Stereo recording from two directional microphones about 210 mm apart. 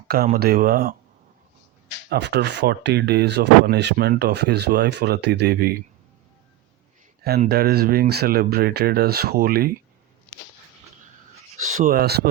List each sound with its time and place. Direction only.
0.3 s speech: 45° right (ahead or behind)
2.0 s speech: 55° right (ahead or behind)
7.4 s speech: 50° right (ahead or behind)
11.5 s speech: 40° right (ahead or behind)